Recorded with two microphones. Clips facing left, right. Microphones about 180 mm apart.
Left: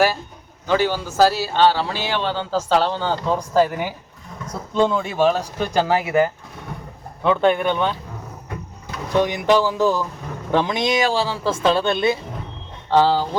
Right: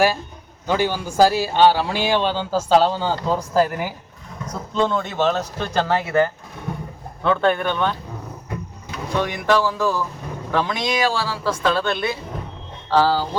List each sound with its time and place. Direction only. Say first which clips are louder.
0.7 s a man's voice: left 1 dB; 15° right (ahead or behind); by 7.9 s 15° left (ahead or behind)
9.2 s speech: left 1 dB; 20° left (ahead or behind)